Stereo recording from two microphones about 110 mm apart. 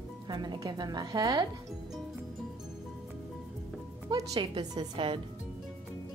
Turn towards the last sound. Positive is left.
turn(degrees=-45)  # may be behind; listen again after turning